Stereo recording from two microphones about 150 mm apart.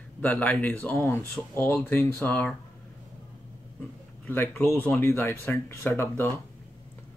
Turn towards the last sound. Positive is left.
turn(degrees=15)  # may be behind; listen again after turning